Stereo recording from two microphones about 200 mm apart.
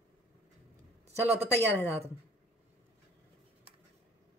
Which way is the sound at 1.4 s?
10° left (ahead or behind).